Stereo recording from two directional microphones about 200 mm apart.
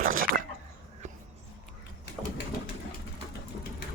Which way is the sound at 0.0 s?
45° right (ahead or behind).